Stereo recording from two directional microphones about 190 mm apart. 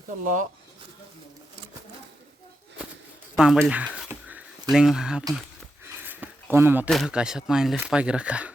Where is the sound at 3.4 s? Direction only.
Centre (ahead or behind).